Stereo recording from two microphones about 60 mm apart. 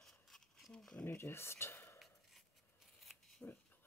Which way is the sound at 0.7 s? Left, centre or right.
Centre.